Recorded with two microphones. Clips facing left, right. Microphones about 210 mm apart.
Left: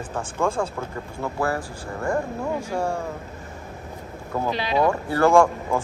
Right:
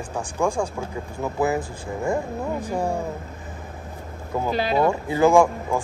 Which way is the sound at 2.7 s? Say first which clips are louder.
Right 2 dB; 15° right (ahead or behind).